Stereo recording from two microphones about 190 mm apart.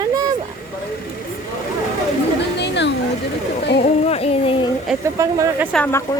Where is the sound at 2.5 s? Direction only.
65° left (ahead or behind).